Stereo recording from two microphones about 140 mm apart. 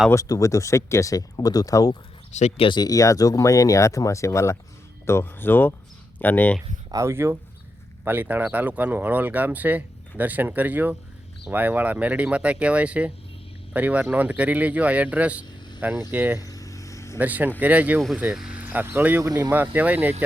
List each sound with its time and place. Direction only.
0.1 s speech: 25° left (ahead or behind)
2.3 s speech: 50° left (ahead or behind)
2.6 s speech: 30° left (ahead or behind); by 6.6 s 15° left (ahead or behind)
6.9 s speech: 20° right (ahead or behind)
16.4 s a sound: 25° left (ahead or behind)
17.2 s speech: 10° right (ahead or behind)